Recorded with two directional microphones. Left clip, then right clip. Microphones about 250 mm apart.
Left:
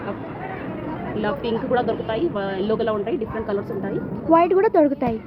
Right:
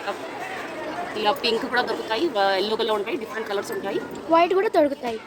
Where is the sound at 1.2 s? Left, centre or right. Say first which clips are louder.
Right 2 dB; right.